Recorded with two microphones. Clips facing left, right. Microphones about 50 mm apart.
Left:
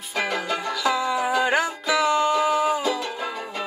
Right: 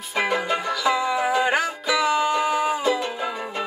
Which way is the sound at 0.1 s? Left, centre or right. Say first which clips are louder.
Right 3 dB; centre.